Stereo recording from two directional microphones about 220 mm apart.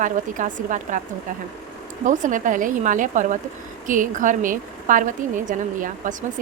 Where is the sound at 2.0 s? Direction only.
35° right (ahead or behind).